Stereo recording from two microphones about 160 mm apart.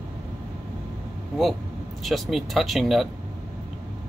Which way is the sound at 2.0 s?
Centre (ahead or behind).